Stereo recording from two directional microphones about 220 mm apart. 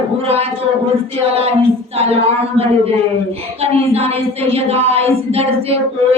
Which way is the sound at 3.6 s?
30° right (ahead or behind).